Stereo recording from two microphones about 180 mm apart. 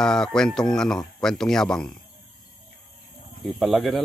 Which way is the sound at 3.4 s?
Centre (ahead or behind).